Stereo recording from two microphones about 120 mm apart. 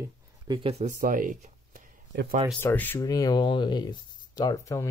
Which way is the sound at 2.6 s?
15° left (ahead or behind).